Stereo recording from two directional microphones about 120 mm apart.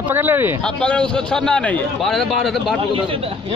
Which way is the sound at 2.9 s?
50° right (ahead or behind).